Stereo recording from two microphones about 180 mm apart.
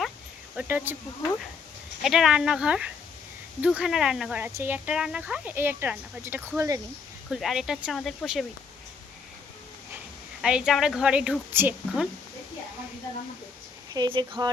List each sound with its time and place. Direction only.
0.5 s speech: 10° right (ahead or behind)
2.0 s a woman's voice: centre (ahead or behind)
7.3 s a woman's voice: centre (ahead or behind)
10.4 s a woman's voice: 5° right (ahead or behind)
13.9 s speech: 25° right (ahead or behind)